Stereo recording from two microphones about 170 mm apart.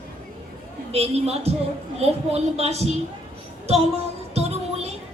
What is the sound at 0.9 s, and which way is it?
A woman's voice, 35° right (ahead or behind).